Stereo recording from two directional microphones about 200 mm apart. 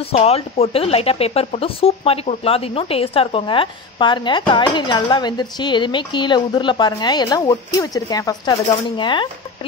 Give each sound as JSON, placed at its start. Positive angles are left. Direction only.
{"t": 0.1, "sound": "speech", "side_deg": 30}